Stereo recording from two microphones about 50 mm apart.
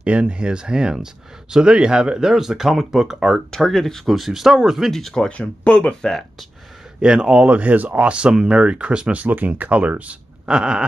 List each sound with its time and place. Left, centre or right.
0.0 s speech: right; by 3.3 s centre
3.5 s speech: centre
4.9 s speech: centre
5.4 s speech: left
7.0 s speech: centre
9.3 s speech: right
10.5 s speech: centre